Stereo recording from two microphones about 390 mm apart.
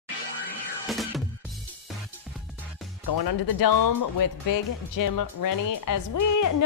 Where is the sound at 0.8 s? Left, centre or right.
Centre.